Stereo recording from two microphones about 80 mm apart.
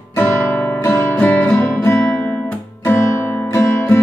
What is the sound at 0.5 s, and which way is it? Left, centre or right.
Music, left.